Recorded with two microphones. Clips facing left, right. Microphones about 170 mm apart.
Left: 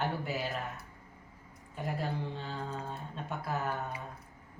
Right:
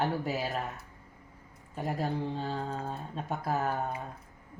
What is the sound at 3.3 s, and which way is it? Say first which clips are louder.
Speech: right 4 dB; 40° right (ahead or behind).